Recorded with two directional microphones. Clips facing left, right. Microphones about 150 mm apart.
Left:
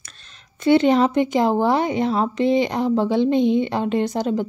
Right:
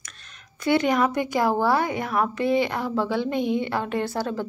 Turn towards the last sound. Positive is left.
turn(degrees=20)  # may be behind; listen again after turning